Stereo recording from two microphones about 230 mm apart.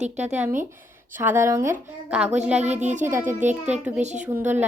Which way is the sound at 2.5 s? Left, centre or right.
Right.